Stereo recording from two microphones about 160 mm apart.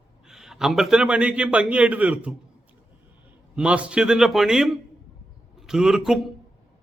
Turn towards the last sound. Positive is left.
turn(degrees=-5)  # may be behind; listen again after turning